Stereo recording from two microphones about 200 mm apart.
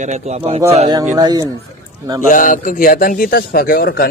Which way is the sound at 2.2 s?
40° left (ahead or behind).